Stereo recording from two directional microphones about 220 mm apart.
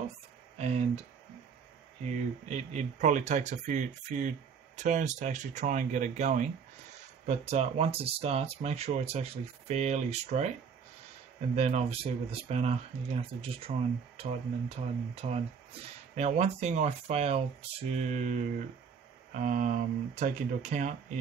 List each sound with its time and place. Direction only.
0.6 s speech: 30° right (ahead or behind)
2.4 s speech: 30° right (ahead or behind)
11.5 s speech: 30° right (ahead or behind)